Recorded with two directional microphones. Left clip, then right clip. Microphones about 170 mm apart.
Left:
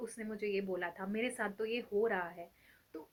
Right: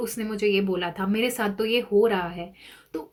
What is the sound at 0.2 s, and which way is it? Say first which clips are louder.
Speech: right 14 dB; 40° right (ahead or behind).